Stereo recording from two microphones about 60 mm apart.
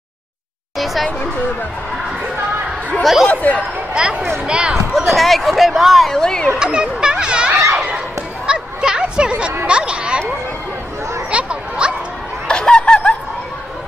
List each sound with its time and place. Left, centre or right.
0.7 s speech: centre
3.0 s speech: centre
3.3 s speech: left
3.9 s speech: right
4.9 s speech: centre
6.6 s a sound: centre
11.2 s a sound: centre
12.4 s chicken: centre